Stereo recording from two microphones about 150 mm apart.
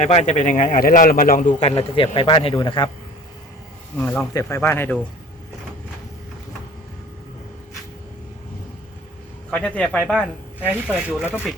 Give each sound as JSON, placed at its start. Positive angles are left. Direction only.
{"t": 0.0, "sound": "a man's voice", "side_deg": 50}
{"t": 3.9, "sound": "a man's voice", "side_deg": 10}
{"t": 9.5, "sound": "a man's voice", "side_deg": 10}
{"t": 10.6, "sound": "speech", "side_deg": -10}